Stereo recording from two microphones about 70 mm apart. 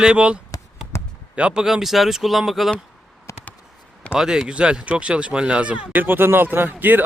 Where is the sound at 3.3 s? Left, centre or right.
Left.